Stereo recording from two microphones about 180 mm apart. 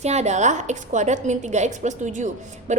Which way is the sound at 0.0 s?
40° right (ahead or behind).